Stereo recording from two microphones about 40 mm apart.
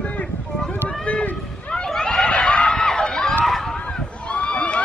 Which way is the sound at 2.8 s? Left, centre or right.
Centre.